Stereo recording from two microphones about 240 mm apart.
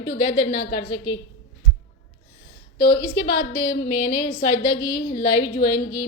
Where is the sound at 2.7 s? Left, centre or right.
Left.